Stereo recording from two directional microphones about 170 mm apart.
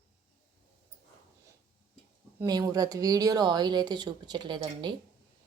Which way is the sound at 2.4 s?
20° right (ahead or behind).